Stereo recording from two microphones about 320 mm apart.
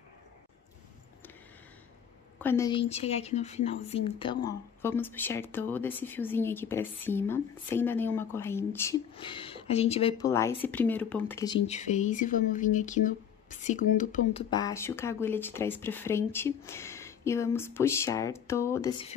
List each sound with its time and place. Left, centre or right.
2.4 s a woman's voice: centre
4.5 s speech: centre; by 14.4 s left
14.5 s speech: centre